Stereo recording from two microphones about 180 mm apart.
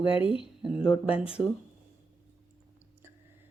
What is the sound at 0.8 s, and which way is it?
Speech, 30° left (ahead or behind).